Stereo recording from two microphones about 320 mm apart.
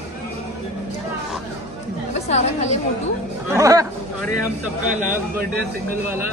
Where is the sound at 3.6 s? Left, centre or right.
Centre.